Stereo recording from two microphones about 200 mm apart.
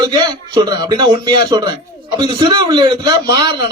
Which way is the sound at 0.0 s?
20° right (ahead or behind).